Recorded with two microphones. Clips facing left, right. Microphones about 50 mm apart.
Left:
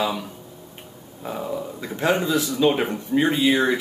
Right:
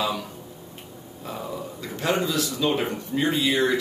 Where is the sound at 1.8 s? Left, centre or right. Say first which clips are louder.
Left 3 dB; left.